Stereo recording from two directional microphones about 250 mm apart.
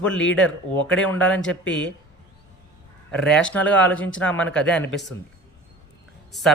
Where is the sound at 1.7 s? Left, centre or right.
Left.